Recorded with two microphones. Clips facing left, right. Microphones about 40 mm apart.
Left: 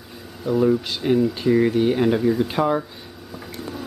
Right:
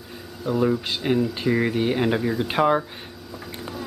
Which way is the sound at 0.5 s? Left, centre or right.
Centre.